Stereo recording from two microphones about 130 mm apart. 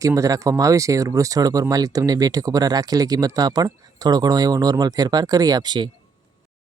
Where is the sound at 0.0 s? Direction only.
25° right (ahead or behind).